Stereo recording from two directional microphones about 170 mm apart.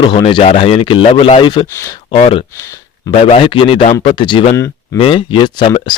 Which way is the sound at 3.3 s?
35° left (ahead or behind).